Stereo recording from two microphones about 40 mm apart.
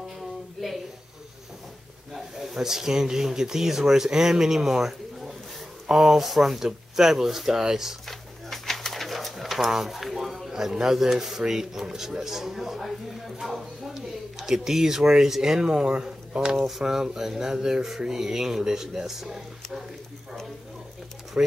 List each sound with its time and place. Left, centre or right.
0.6 s a sound: centre
2.1 s speech: centre
8.1 s pigeon: centre
10.5 s speech: centre
16.5 s speech: centre
21.4 s speech: right